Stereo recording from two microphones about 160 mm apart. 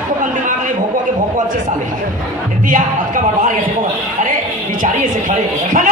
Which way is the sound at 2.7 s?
55° right (ahead or behind).